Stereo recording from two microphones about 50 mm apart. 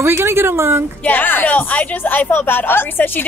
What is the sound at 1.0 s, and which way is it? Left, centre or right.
A woman's voice, left.